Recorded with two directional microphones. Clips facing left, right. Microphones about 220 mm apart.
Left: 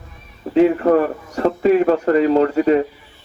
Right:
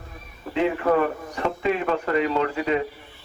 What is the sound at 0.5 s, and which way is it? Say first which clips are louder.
A man's voice: left 8 dB; 40° left (ahead or behind).